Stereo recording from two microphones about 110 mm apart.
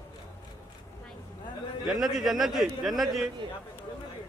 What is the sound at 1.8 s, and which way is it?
A man's voice, centre (ahead or behind).